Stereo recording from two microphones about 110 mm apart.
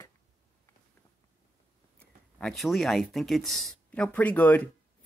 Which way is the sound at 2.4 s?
Centre (ahead or behind).